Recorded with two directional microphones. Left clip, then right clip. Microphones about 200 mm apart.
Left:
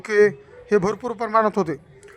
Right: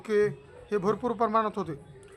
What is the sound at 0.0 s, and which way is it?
A man's voice, 30° left (ahead or behind).